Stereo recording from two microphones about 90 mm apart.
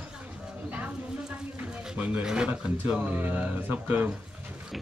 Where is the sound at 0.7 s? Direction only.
15° right (ahead or behind).